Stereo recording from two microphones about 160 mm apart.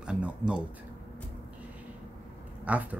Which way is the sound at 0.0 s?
5° right (ahead or behind).